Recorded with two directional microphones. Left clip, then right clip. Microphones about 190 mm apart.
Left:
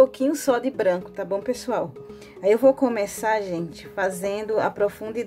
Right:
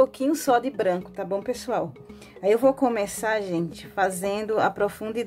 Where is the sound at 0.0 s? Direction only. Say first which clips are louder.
Left 3 dB; 10° right (ahead or behind).